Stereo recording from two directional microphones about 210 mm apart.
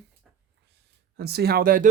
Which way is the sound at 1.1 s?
50° right (ahead or behind).